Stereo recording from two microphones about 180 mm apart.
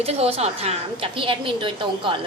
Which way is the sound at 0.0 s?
35° right (ahead or behind).